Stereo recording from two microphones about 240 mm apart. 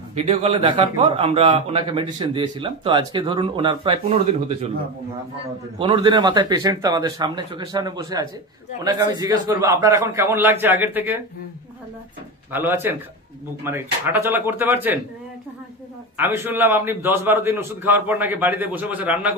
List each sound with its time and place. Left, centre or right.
0.1 s a man's voice: right
5.8 s a man's voice: right
12.5 s a man's voice: centre
16.2 s a man's voice: centre